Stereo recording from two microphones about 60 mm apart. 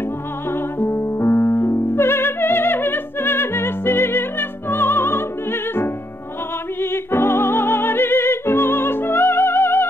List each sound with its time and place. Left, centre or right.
0.5 s music: left